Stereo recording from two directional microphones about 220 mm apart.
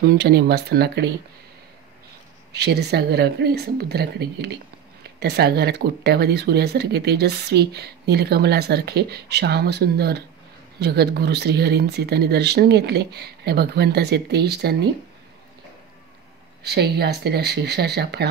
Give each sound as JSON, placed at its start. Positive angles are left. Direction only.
{"t": 0.0, "sound": "speech", "side_deg": -45}
{"t": 2.5, "sound": "speech", "side_deg": -50}
{"t": 16.6, "sound": "speech", "side_deg": -50}